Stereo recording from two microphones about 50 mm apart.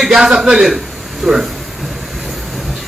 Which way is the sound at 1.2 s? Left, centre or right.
Centre.